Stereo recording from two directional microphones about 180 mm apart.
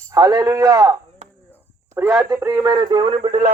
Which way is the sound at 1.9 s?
15° right (ahead or behind).